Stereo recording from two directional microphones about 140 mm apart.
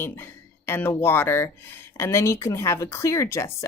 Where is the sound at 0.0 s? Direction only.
15° left (ahead or behind).